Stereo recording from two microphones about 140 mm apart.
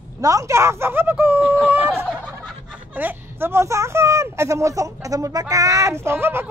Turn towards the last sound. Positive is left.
turn(degrees=-15)  # may be behind; listen again after turning